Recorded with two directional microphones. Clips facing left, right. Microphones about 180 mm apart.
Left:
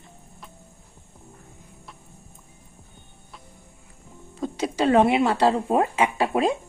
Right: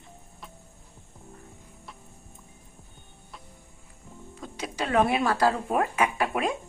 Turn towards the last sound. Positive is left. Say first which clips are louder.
# left 5 dB
turn(degrees=30)  # may be behind; listen again after turning